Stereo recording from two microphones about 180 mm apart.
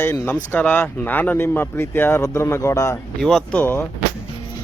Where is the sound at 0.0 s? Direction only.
10° left (ahead or behind).